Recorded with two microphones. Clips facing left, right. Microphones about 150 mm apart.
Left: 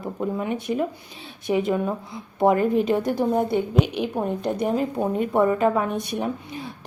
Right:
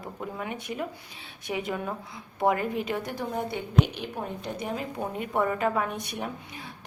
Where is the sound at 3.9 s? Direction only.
65° left (ahead or behind).